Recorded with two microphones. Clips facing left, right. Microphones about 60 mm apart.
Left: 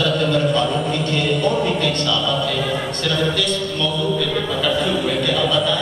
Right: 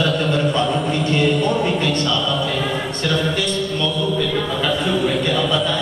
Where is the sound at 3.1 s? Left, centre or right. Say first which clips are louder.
Even; centre.